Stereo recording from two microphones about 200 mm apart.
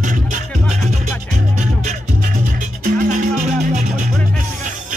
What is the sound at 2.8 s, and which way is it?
Music, 45° right (ahead or behind).